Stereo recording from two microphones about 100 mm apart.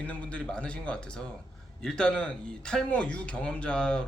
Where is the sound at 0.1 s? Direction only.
10° left (ahead or behind).